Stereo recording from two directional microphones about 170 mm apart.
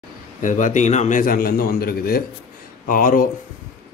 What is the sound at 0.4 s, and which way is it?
Speech, 50° left (ahead or behind).